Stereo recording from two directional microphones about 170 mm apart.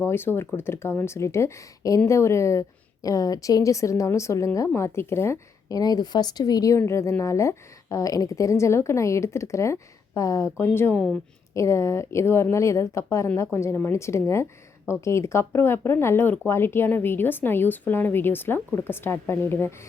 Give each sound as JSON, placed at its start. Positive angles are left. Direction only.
{"t": 0.0, "sound": "a woman's voice", "side_deg": 15}